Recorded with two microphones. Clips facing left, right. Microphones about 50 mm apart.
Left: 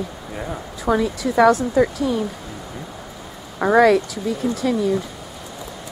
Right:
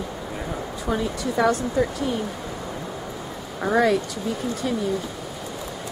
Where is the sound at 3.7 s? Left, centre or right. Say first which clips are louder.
Left 6 dB; centre.